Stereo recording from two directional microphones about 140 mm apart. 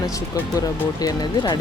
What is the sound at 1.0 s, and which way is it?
Speech, 30° left (ahead or behind).